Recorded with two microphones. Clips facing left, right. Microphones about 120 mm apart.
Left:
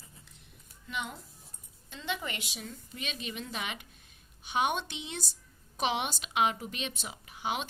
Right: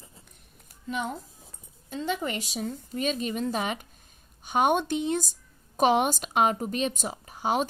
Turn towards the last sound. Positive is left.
turn(degrees=-40)  # may be behind; listen again after turning